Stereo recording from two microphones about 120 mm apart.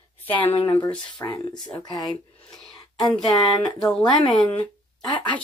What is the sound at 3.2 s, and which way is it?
Speech, 30° left (ahead or behind).